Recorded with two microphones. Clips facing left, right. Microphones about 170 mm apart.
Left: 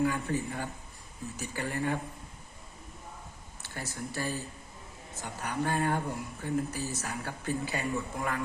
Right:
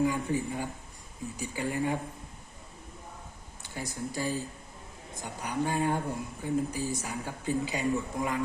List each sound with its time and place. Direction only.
0.0 s speech: 15° right (ahead or behind)
3.6 s speech: 15° right (ahead or behind)